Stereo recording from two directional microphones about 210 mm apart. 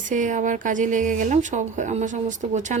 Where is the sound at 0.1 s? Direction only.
35° right (ahead or behind).